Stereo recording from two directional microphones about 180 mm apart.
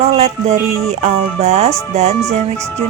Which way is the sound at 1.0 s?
40° right (ahead or behind).